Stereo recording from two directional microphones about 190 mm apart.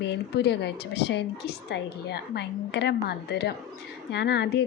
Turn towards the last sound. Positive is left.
turn(degrees=60)  # may be behind; listen again after turning